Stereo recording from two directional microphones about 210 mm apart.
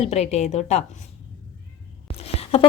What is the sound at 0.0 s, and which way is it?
Speech, 30° left (ahead or behind).